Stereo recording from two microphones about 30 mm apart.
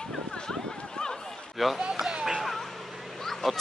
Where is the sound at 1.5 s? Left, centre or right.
Centre.